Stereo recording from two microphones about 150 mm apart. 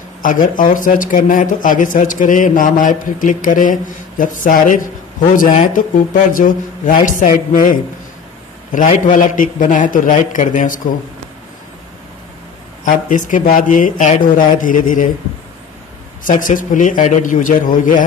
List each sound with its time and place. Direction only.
0.2 s speech: 60° left (ahead or behind)
6.3 s speech: 65° left (ahead or behind)
8.7 s speech: 60° left (ahead or behind)
12.8 s speech: 60° left (ahead or behind)
16.3 s speech: 60° left (ahead or behind)